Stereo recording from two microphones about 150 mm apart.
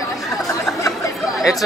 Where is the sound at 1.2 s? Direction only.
Centre (ahead or behind).